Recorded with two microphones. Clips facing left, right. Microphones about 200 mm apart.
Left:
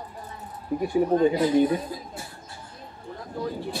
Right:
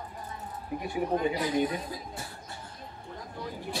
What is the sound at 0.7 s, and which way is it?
Speech, 40° left (ahead or behind).